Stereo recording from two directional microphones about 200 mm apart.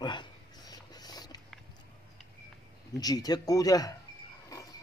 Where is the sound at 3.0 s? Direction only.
20° left (ahead or behind).